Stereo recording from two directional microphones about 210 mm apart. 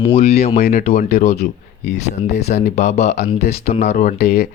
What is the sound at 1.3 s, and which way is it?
Speech, 50° left (ahead or behind).